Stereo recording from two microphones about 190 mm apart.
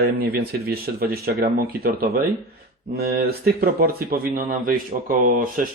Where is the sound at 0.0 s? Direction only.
55° right (ahead or behind).